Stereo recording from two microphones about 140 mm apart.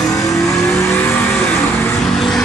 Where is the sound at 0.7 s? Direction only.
10° left (ahead or behind).